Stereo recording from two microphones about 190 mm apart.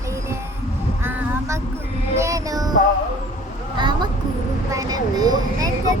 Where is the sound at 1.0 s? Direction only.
15° right (ahead or behind).